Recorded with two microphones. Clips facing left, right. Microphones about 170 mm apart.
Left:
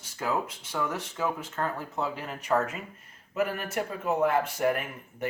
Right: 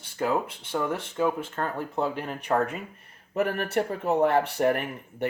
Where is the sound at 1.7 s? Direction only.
60° right (ahead or behind).